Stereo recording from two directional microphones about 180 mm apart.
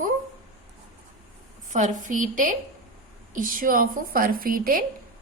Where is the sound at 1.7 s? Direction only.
45° right (ahead or behind).